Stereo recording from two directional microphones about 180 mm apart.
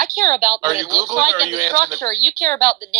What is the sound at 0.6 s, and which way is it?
Speech, 20° right (ahead or behind).